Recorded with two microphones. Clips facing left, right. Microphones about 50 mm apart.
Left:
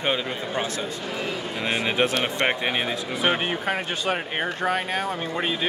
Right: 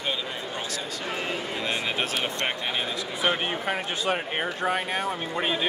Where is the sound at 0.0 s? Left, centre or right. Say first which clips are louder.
Left 5 dB; left.